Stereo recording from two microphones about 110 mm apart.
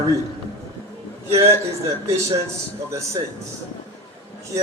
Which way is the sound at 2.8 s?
25° right (ahead or behind).